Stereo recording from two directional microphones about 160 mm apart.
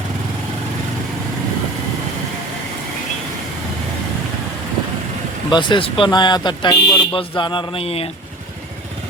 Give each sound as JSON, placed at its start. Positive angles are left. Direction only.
{"t": 5.5, "sound": "speech", "side_deg": 30}